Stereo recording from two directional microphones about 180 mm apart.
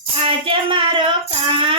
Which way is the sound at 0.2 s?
30° right (ahead or behind).